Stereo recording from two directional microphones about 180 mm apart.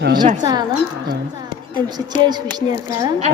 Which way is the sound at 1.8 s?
25° right (ahead or behind).